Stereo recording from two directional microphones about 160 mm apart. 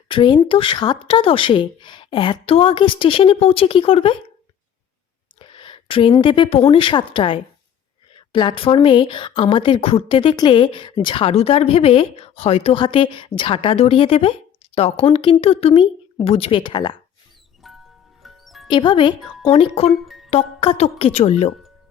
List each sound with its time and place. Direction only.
0.1 s speech: 30° left (ahead or behind)
5.4 s speech: 30° left (ahead or behind)
17.6 s music: centre (ahead or behind)
18.7 s speech: 30° left (ahead or behind)
19.9 s music: centre (ahead or behind)
20.3 s speech: 40° left (ahead or behind)